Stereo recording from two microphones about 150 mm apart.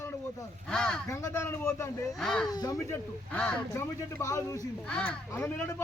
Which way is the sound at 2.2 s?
Centre (ahead or behind).